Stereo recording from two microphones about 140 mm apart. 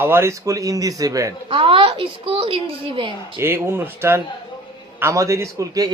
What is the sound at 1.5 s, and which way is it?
A woman's voice, 40° right (ahead or behind).